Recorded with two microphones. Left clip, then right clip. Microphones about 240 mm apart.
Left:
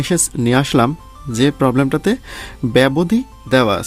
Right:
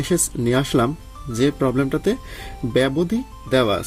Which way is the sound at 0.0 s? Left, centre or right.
Left.